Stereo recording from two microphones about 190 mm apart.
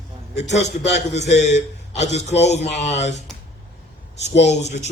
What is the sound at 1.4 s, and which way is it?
A man's voice, 35° left (ahead or behind).